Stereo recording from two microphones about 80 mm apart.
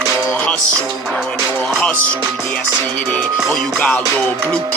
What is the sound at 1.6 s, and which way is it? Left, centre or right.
Music, centre.